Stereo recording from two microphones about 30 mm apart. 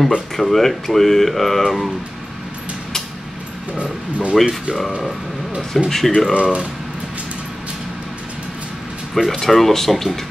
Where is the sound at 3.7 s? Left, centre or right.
Right.